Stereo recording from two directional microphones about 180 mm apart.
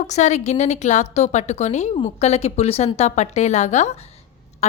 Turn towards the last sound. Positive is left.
turn(degrees=35)  # may be behind; listen again after turning